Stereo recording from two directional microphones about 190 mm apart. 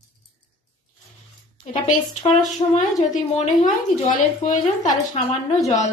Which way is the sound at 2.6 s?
25° left (ahead or behind).